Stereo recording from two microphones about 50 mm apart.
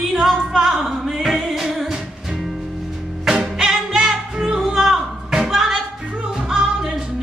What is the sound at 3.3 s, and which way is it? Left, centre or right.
Music, centre.